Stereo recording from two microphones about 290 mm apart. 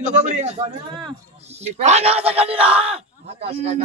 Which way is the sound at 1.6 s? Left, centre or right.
Right.